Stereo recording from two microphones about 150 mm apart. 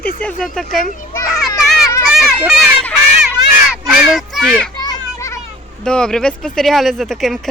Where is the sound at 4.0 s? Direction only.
Centre (ahead or behind).